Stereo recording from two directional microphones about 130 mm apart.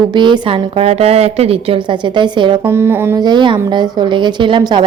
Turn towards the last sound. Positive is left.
turn(degrees=-35)  # may be behind; listen again after turning